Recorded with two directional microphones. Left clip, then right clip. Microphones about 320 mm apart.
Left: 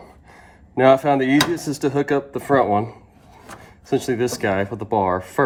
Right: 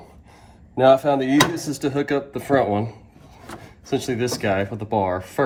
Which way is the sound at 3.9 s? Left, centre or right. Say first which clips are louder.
Left 3 dB; left.